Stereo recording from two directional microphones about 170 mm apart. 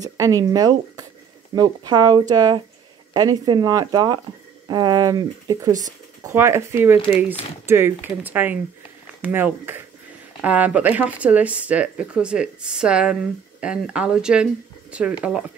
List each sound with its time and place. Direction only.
0.0 s speech: 20° right (ahead or behind)
5.7 s speech: 45° right (ahead or behind)
6.2 s speech: 15° right (ahead or behind)